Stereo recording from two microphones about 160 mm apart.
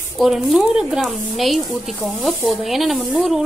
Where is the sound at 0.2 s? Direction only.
Centre (ahead or behind).